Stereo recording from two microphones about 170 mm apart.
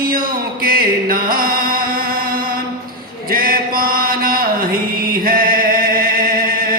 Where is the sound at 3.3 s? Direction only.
60° right (ahead or behind).